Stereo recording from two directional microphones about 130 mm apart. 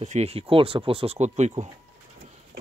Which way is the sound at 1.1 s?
60° right (ahead or behind).